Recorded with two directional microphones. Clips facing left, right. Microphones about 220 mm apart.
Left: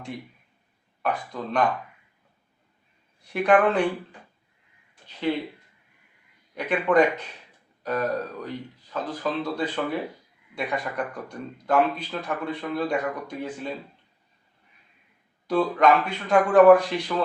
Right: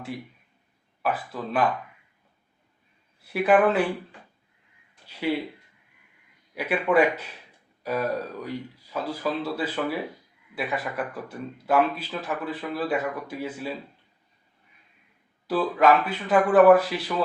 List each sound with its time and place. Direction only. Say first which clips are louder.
1.0 s speech: even; 5° right (ahead or behind)
3.2 s speech: even; 5° right (ahead or behind)
6.5 s speech: left 1 dB; 5° right (ahead or behind)
15.4 s speech: even; 5° right (ahead or behind)